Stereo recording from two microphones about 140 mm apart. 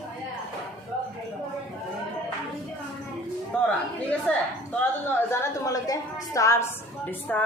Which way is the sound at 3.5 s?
5° left (ahead or behind).